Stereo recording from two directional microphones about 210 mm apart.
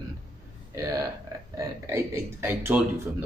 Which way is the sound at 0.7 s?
15° right (ahead or behind).